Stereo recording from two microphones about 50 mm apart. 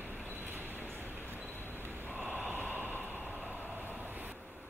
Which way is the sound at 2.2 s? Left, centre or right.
Right.